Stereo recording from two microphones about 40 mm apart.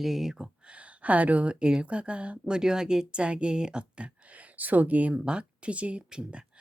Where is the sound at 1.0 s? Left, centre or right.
Right.